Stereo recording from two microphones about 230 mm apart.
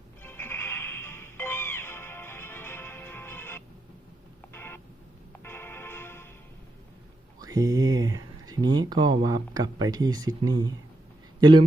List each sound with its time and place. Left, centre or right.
0.2 s music: centre
4.5 s a sound: centre
5.4 s music: centre
7.3 s speech: centre